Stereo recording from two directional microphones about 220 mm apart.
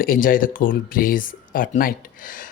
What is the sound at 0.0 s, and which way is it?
Speech, 40° left (ahead or behind).